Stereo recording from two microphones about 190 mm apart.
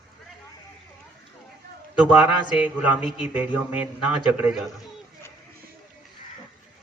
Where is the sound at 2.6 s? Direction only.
5° right (ahead or behind).